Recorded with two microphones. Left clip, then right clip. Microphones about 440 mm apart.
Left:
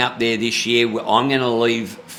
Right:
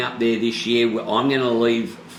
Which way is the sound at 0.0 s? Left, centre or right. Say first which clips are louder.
Left 2 dB; left.